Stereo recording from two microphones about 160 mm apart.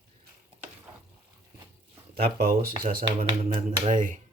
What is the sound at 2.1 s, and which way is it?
Speech, 70° right (ahead or behind).